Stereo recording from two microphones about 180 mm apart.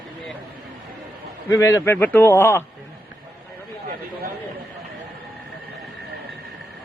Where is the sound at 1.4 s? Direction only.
15° left (ahead or behind).